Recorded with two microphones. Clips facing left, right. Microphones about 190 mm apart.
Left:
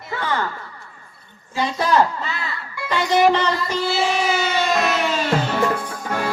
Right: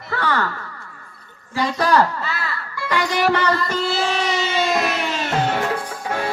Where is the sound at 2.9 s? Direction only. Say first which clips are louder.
Left 3 dB; 20° left (ahead or behind).